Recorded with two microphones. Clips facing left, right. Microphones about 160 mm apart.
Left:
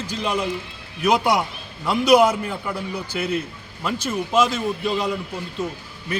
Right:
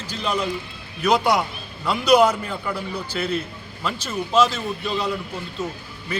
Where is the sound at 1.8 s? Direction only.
10° left (ahead or behind).